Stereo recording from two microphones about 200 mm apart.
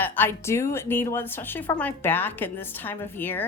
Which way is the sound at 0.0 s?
10° left (ahead or behind).